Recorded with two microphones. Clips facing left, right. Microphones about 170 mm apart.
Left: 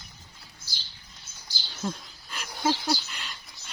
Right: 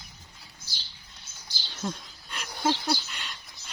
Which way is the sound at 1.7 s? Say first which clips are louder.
Left 1 dB; centre (ahead or behind).